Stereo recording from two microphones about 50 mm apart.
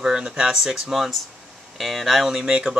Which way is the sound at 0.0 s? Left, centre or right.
Centre.